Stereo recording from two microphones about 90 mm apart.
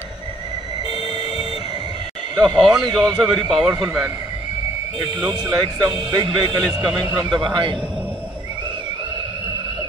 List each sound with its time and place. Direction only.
2.3 s speech: 50° right (ahead or behind)
5.3 s a man's voice: 55° right (ahead or behind)